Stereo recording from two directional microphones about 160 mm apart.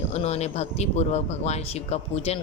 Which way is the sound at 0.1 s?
40° left (ahead or behind).